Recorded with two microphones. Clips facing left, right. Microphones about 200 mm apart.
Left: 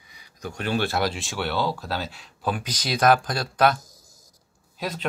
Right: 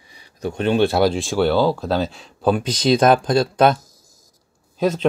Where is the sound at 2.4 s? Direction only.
25° right (ahead or behind).